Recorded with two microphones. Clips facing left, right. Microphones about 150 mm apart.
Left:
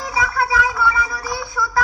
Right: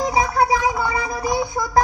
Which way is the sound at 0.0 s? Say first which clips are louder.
Right 4 dB; 20° right (ahead or behind).